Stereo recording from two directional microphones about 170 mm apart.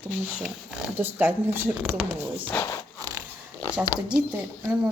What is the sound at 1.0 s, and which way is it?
A woman's voice, 10° right (ahead or behind).